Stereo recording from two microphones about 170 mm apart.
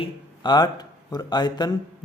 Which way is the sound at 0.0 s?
25° left (ahead or behind).